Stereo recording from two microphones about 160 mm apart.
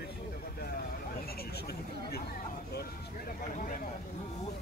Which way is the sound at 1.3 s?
75° left (ahead or behind).